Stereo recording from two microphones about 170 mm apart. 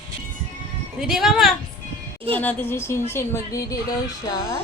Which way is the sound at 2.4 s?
10° left (ahead or behind).